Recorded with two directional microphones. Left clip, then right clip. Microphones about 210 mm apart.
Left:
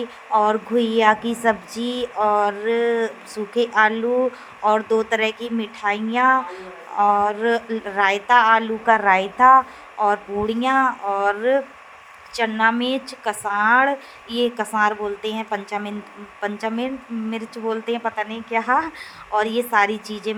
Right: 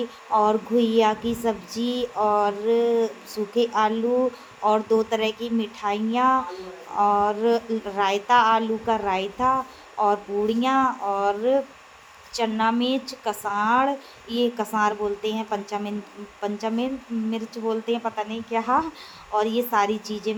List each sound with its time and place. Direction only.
0.3 s speech: 15° left (ahead or behind)